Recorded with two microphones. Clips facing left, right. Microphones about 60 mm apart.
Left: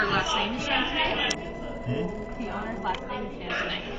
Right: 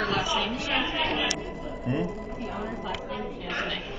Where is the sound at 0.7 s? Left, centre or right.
Centre.